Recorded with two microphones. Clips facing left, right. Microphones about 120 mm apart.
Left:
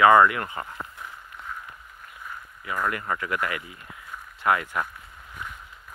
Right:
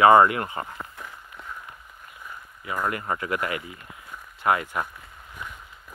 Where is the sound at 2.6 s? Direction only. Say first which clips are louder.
Even; 20° right (ahead or behind).